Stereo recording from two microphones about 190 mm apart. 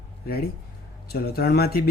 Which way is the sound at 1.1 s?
55° left (ahead or behind).